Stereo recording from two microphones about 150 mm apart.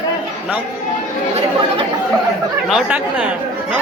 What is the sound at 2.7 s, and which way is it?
Speech, 5° right (ahead or behind).